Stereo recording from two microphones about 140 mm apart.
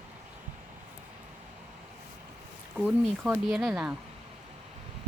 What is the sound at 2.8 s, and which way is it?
Speech, 10° right (ahead or behind).